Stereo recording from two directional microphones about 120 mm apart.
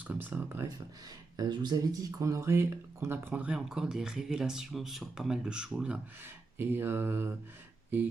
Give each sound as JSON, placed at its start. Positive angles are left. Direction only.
{"t": 0.1, "sound": "speech", "side_deg": -15}
{"t": 1.4, "sound": "speech", "side_deg": -35}